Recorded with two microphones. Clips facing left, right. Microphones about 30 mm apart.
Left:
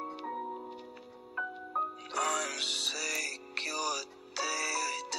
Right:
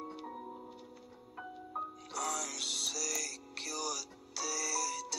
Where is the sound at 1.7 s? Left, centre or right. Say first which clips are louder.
Left 7 dB; left.